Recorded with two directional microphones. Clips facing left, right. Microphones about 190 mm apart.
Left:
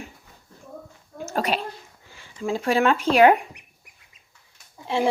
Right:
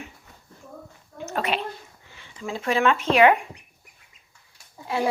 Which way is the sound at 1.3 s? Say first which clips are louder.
Left 2 dB; 40° left (ahead or behind).